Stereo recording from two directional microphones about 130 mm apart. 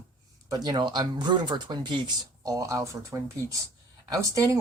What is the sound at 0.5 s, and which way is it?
Speech, 35° right (ahead or behind).